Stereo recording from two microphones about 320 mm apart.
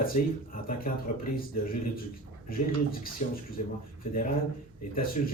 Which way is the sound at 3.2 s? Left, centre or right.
Left.